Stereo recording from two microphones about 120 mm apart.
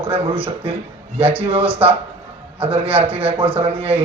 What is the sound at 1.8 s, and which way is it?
A man's voice, 55° right (ahead or behind).